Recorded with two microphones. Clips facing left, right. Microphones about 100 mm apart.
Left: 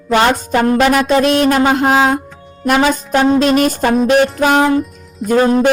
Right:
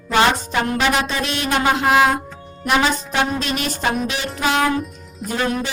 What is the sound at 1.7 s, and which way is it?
Music, 35° left (ahead or behind).